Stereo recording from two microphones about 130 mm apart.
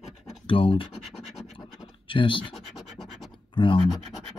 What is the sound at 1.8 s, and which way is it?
Scratch, 40° left (ahead or behind).